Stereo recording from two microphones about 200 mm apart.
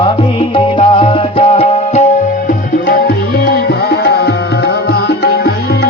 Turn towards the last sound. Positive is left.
turn(degrees=55)  # may be behind; listen again after turning